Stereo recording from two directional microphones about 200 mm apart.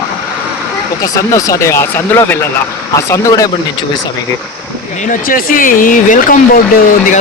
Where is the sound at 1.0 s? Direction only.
15° left (ahead or behind).